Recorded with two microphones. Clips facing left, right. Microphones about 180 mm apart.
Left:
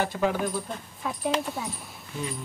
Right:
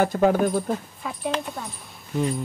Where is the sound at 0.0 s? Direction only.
45° right (ahead or behind).